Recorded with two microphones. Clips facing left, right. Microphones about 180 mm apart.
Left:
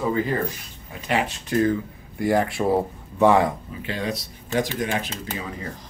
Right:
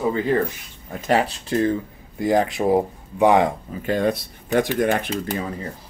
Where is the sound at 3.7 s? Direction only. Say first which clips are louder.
Right 7 dB; 45° right (ahead or behind).